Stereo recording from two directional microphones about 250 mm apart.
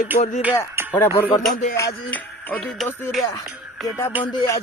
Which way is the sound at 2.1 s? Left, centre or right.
Centre.